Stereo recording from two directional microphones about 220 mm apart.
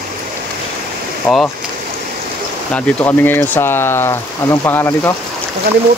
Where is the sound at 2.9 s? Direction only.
10° left (ahead or behind).